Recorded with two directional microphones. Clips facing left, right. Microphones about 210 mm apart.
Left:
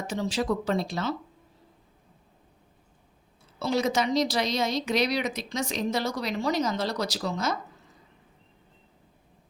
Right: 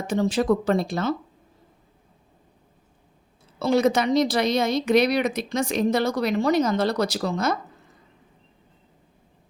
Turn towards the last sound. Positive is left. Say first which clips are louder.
# right 5 dB
turn(degrees=-55)  # may be behind; listen again after turning